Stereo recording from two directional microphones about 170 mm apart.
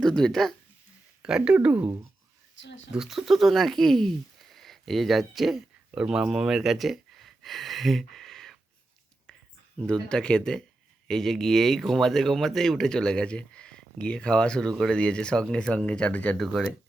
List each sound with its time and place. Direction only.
0.0 s speech: 5° left (ahead or behind)
2.6 s speech: 90° left
2.9 s speech: 5° right (ahead or behind)
9.7 s speech: 5° left (ahead or behind)